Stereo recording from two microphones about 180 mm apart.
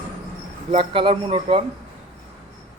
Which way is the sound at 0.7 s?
30° right (ahead or behind).